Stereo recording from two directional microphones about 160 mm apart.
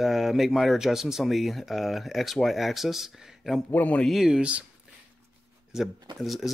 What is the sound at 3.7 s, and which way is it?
Speech, 10° left (ahead or behind).